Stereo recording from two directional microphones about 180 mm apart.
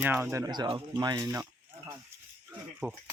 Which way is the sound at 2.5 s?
10° right (ahead or behind).